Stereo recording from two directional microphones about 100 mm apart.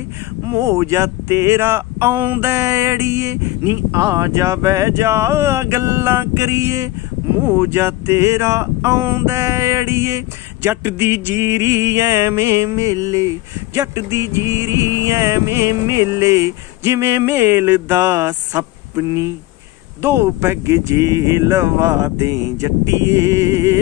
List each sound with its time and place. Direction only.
0.5 s speech: 30° right (ahead or behind)
7.3 s speech: 20° right (ahead or behind)